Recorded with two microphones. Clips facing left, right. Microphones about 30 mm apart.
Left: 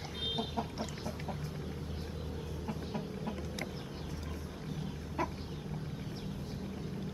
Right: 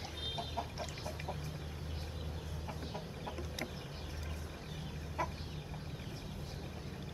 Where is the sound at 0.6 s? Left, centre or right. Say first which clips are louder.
Left 3 dB; centre.